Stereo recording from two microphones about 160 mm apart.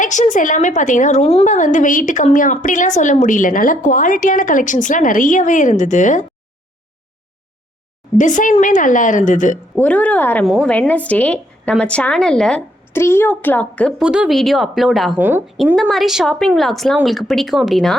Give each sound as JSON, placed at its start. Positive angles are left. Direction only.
{"t": 0.0, "sound": "a woman's voice", "side_deg": 50}
{"t": 8.2, "sound": "a woman's voice", "side_deg": 50}
{"t": 9.7, "sound": "a woman's voice", "side_deg": 10}
{"t": 10.4, "sound": "a woman's voice", "side_deg": 0}
{"t": 14.0, "sound": "speech", "side_deg": -5}
{"t": 15.2, "sound": "a woman's voice", "side_deg": -10}
{"t": 15.4, "sound": "speech", "side_deg": 0}